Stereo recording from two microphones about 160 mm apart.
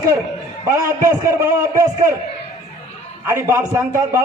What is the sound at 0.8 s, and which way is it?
A man's voice, 20° right (ahead or behind).